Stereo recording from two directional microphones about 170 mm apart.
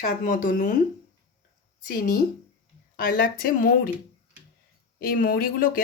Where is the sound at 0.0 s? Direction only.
50° left (ahead or behind).